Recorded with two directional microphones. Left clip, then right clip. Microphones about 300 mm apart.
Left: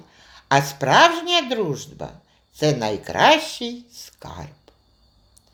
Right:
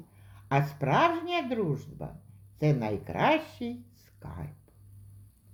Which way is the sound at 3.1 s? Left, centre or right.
Centre.